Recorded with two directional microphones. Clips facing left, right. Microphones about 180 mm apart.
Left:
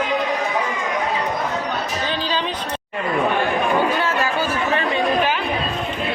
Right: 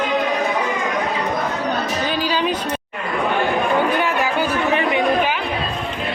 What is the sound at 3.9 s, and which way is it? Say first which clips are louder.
Chatter: right 2 dB; 15° right (ahead or behind).